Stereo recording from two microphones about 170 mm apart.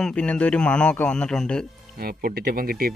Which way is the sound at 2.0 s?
60° right (ahead or behind).